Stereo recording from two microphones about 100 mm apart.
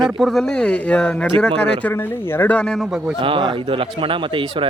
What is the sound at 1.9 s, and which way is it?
Speech, 20° left (ahead or behind).